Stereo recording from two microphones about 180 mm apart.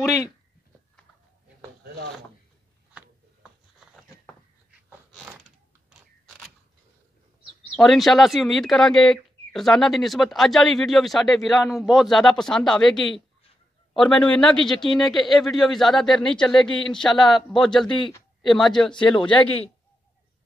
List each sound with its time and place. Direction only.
0.0 s speech: 15° left (ahead or behind)
3.8 s a sound: 5° right (ahead or behind)
7.7 s speech: centre (ahead or behind)